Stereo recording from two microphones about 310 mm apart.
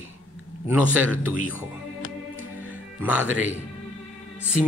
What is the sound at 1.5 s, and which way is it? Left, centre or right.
Music, left.